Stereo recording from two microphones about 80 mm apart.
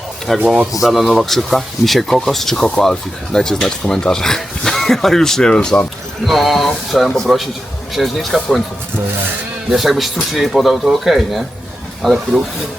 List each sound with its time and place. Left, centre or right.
0.3 s speech: centre
0.7 s speech: centre
6.2 s speech: centre
9.6 s speech: centre